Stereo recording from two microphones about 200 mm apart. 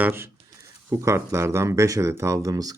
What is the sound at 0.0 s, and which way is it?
Speech, 10° right (ahead or behind).